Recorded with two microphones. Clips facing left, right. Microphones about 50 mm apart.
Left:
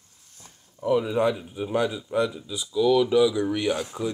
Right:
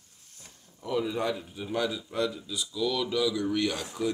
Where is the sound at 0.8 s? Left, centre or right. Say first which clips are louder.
Left 7 dB; centre.